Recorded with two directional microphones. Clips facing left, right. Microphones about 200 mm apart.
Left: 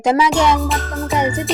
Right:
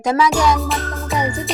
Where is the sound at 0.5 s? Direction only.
Centre (ahead or behind).